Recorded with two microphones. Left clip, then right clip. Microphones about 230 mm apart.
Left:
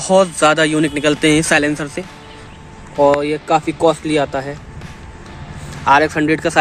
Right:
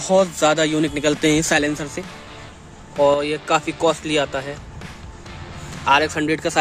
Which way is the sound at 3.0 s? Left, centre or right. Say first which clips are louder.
Left 4 dB; centre.